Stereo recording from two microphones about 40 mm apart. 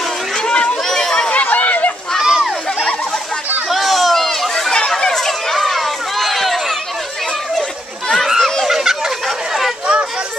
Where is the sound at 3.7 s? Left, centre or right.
Centre.